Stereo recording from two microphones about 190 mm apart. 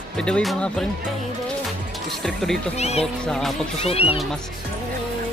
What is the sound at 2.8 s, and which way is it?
Speech, 35° left (ahead or behind).